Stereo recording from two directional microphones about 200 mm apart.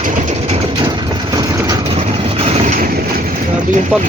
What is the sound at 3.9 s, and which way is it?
Speech, 5° right (ahead or behind).